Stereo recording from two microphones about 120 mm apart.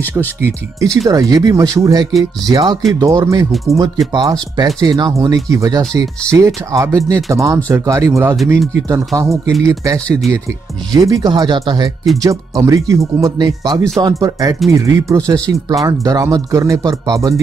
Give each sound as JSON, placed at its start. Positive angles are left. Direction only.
{"t": 0.7, "sound": "speech", "side_deg": -25}
{"t": 15.5, "sound": "speech", "side_deg": 0}
{"t": 15.9, "sound": "speech", "side_deg": -30}